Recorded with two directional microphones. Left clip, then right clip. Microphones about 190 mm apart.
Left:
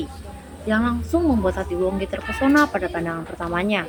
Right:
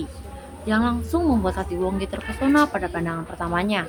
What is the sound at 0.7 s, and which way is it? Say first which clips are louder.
Speech: left 1 dB; 5° left (ahead or behind).